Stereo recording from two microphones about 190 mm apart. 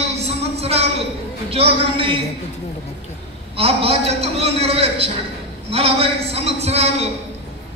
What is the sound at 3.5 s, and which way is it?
A man's voice, 30° right (ahead or behind).